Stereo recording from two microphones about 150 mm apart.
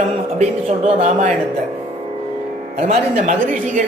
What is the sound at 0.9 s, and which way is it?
Speech, 45° right (ahead or behind).